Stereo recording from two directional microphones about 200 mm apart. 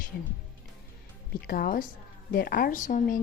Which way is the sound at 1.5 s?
45° left (ahead or behind).